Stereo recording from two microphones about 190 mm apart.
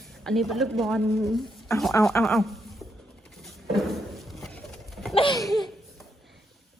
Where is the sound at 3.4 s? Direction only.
Centre (ahead or behind).